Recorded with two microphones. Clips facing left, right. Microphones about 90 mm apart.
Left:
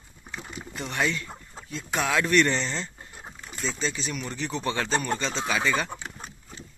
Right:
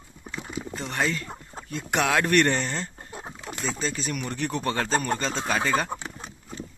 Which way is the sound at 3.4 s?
70° right (ahead or behind).